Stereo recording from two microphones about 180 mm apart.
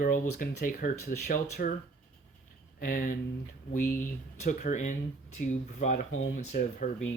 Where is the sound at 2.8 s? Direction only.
50° left (ahead or behind).